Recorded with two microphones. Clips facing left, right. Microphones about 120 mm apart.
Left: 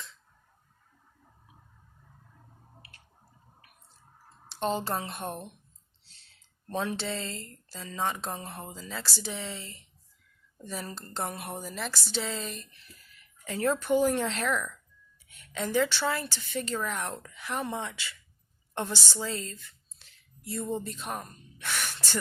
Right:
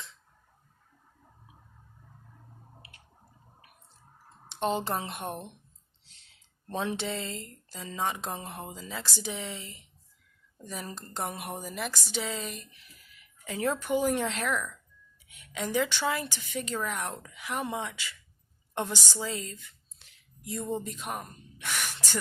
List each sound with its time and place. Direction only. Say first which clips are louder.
4.4 s a woman's voice: right 1 dB; 15° right (ahead or behind)
6.8 s speech: right 1 dB; 15° right (ahead or behind)
10.8 s a woman's voice: right 1 dB; 15° right (ahead or behind)